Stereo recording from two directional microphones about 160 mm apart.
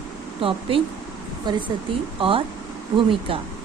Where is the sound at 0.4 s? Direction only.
35° right (ahead or behind).